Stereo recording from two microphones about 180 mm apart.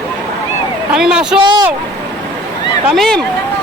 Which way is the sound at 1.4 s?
25° right (ahead or behind).